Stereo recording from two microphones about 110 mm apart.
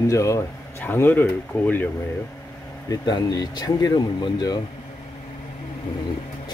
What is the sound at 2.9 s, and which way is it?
Speech, 40° left (ahead or behind).